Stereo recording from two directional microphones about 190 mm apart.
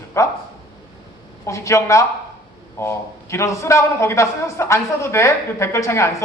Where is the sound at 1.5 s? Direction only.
15° left (ahead or behind).